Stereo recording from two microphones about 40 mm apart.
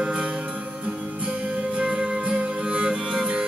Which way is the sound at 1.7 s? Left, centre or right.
Right.